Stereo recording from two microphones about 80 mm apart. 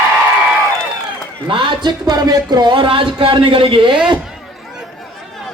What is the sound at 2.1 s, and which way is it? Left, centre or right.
Speech, right.